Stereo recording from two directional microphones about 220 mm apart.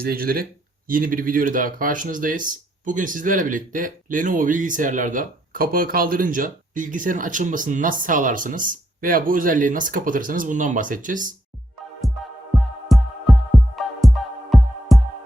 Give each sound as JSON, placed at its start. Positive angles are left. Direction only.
{"t": 0.0, "sound": "speech", "side_deg": -40}
{"t": 12.5, "sound": "music", "side_deg": 0}